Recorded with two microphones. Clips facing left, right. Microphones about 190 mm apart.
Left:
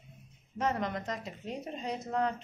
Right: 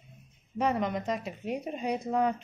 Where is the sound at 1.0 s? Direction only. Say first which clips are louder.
Right 6 dB; 15° right (ahead or behind).